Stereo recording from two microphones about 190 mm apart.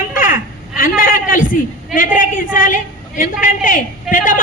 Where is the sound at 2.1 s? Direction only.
45° left (ahead or behind).